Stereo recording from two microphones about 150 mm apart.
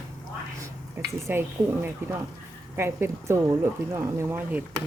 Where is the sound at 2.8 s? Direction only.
15° right (ahead or behind).